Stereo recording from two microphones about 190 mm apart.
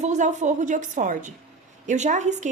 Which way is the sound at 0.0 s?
40° right (ahead or behind).